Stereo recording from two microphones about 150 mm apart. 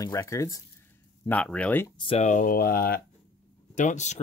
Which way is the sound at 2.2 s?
65° left (ahead or behind).